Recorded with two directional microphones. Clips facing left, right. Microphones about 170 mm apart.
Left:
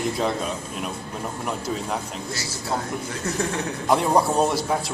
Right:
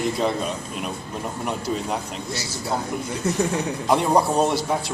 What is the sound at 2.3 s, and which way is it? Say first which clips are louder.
Speech: right 4 dB; 25° right (ahead or behind).